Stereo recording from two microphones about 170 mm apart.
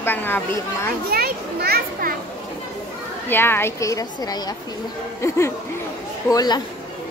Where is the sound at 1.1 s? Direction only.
65° right (ahead or behind).